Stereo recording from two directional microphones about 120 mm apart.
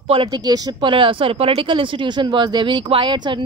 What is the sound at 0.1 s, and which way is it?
A woman's voice, 45° right (ahead or behind).